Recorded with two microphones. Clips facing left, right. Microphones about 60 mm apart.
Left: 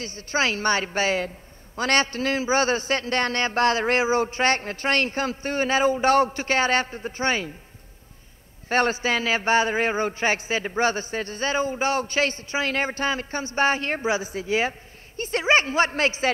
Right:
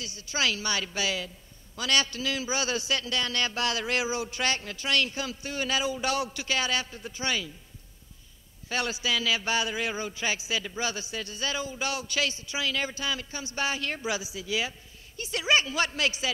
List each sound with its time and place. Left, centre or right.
0.0 s a man's voice: left
8.6 s a man's voice: left